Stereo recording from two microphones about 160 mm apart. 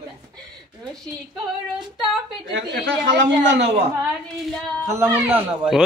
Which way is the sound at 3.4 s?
90° right.